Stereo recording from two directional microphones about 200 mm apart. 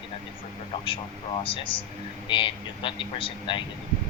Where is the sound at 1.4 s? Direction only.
25° left (ahead or behind).